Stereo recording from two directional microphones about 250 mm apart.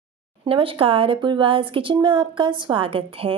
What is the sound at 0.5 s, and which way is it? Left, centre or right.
A woman's voice, right.